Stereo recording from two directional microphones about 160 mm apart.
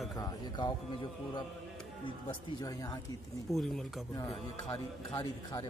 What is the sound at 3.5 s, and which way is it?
Speech, centre (ahead or behind).